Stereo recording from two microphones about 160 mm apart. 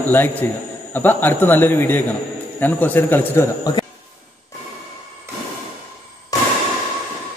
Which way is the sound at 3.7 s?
25° left (ahead or behind).